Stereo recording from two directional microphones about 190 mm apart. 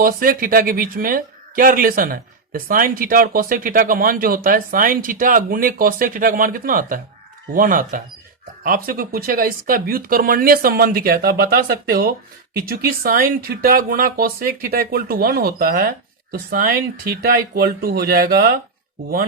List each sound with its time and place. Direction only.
0.0 s speech: 50° right (ahead or behind)